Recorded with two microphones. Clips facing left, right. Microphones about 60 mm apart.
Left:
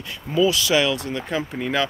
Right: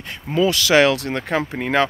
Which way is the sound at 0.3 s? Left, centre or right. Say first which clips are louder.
Right 2 dB; right.